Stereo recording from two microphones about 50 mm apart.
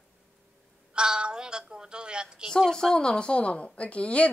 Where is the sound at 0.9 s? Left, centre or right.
Centre.